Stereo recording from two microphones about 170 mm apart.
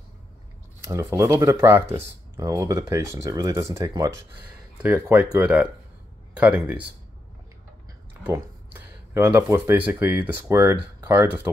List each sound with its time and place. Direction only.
0.8 s speech: 20° right (ahead or behind)
8.1 s speech: 10° right (ahead or behind)